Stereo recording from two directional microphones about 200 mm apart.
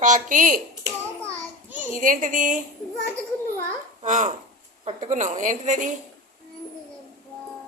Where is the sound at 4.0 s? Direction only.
40° right (ahead or behind).